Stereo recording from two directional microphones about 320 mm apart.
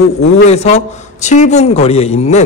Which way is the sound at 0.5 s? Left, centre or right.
Centre.